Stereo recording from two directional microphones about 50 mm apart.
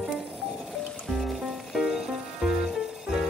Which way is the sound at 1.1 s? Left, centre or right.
Centre.